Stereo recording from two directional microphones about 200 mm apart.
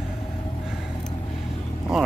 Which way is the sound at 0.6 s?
Centre (ahead or behind).